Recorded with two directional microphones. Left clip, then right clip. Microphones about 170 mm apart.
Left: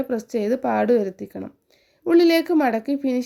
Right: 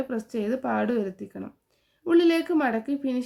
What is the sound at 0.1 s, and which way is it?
Speech, 30° left (ahead or behind).